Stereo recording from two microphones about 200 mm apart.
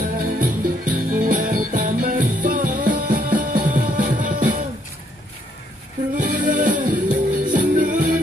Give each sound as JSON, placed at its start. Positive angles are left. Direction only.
{"t": 0.4, "sound": "music", "side_deg": -40}
{"t": 6.1, "sound": "music", "side_deg": -40}